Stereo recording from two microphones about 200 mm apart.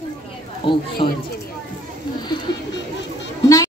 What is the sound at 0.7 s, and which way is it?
Speech, 25° left (ahead or behind).